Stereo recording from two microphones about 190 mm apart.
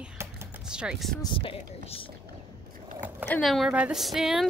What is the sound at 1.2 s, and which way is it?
Speech, 30° left (ahead or behind).